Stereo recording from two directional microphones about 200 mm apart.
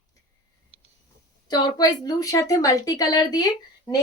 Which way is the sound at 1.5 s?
20° left (ahead or behind).